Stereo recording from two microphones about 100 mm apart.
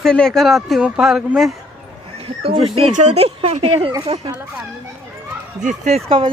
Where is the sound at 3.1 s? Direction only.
90° right.